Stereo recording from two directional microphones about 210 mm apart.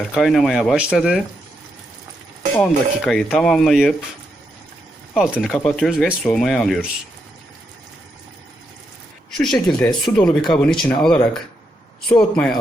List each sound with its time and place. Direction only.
0.1 s speech: centre (ahead or behind)
2.6 s speech: centre (ahead or behind)
5.1 s speech: 5° right (ahead or behind)
9.4 s speech: centre (ahead or behind)